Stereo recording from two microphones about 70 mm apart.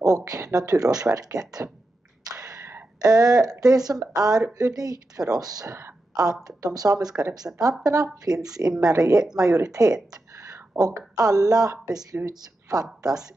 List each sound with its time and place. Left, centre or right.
0.0 s speech: right
2.3 s a sound: right
3.0 s speech: right
5.7 s a woman's voice: right
6.4 s speech: right
8.8 s speech: right
9.2 s speech: centre
9.5 s speech: right